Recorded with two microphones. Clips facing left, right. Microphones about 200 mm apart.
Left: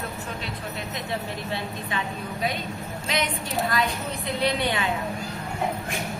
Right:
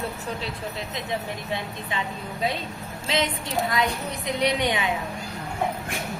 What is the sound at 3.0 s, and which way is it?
A woman's voice, 25° right (ahead or behind).